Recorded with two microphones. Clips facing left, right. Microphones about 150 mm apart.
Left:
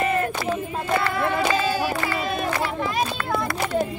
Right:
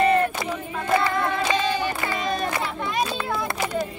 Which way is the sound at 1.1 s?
5° left (ahead or behind).